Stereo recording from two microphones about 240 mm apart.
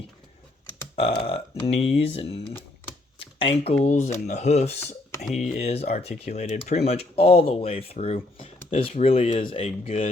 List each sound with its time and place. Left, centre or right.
0.9 s speech: left
3.2 s shuffling cards: left
3.8 s speech: left